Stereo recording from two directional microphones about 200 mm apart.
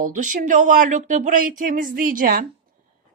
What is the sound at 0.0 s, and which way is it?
A woman's voice, 40° right (ahead or behind).